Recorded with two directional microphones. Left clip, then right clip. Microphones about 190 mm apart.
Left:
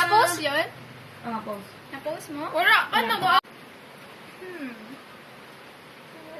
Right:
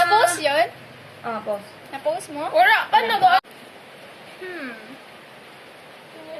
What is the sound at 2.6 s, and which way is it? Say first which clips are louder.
Speech: right 4 dB; 20° left (ahead or behind).